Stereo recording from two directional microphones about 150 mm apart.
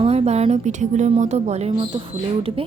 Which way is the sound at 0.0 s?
45° right (ahead or behind).